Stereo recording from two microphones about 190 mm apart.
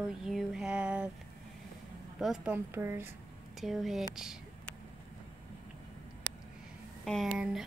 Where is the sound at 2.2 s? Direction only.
5° right (ahead or behind).